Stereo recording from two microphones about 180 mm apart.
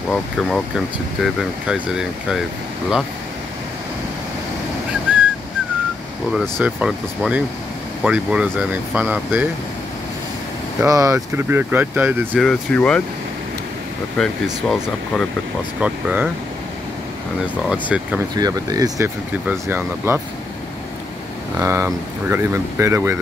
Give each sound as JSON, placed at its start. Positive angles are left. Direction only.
{"t": 0.1, "sound": "speech", "side_deg": 0}
{"t": 6.3, "sound": "speech", "side_deg": -5}
{"t": 10.8, "sound": "speech", "side_deg": -15}
{"t": 12.4, "sound": "speech", "side_deg": 5}
{"t": 14.1, "sound": "speech", "side_deg": 0}
{"t": 17.6, "sound": "speech", "side_deg": -5}
{"t": 18.3, "sound": "speech", "side_deg": -20}
{"t": 19.4, "sound": "speech", "side_deg": -10}
{"t": 21.5, "sound": "speech", "side_deg": -15}